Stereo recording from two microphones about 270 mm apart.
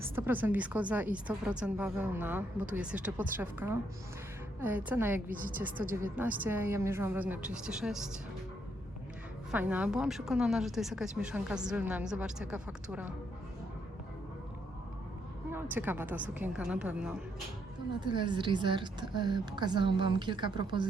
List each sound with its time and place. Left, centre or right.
0.0 s a woman's voice: centre
4.9 s a woman's voice: centre
5.3 s a woman's voice: right
5.9 s a woman's voice: centre
9.5 s a woman's voice: centre
15.5 s a woman's voice: centre
18.0 s a woman's voice: centre